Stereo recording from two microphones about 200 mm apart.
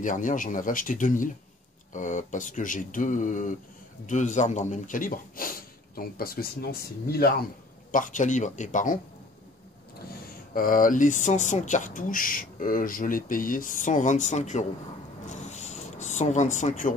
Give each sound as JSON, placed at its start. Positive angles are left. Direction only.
{"t": 0.0, "sound": "speech", "side_deg": 40}
{"t": 7.9, "sound": "speech", "side_deg": 40}
{"t": 10.5, "sound": "speech", "side_deg": 45}
{"t": 15.2, "sound": "a sound", "side_deg": 35}